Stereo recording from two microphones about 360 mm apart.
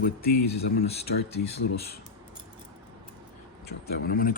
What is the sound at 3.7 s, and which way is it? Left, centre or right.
Speech, left.